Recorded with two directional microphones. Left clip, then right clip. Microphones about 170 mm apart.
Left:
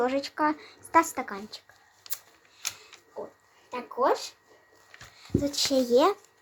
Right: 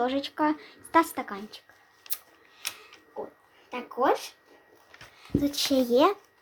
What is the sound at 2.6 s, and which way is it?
Camera, 15° left (ahead or behind).